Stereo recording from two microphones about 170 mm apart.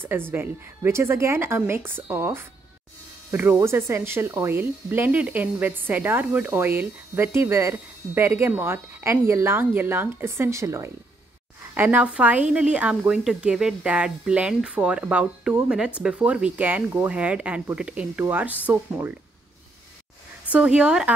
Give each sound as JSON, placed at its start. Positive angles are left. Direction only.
{"t": 0.0, "sound": "speech", "side_deg": -15}
{"t": 20.4, "sound": "speech", "side_deg": -5}